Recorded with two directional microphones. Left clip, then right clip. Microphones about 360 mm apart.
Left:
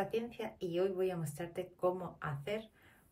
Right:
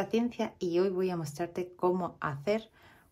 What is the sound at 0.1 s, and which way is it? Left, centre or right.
Speech, centre.